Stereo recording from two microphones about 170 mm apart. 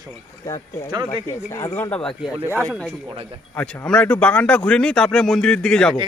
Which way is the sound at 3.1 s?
35° right (ahead or behind).